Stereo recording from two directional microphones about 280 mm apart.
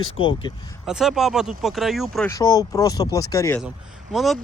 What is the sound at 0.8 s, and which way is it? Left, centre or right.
Speech, centre.